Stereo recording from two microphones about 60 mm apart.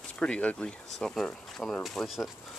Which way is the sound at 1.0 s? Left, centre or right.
Centre.